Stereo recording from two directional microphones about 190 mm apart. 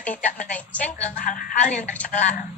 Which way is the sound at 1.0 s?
45° left (ahead or behind).